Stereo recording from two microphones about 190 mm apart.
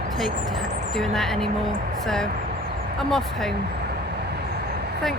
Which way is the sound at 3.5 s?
60° right (ahead or behind).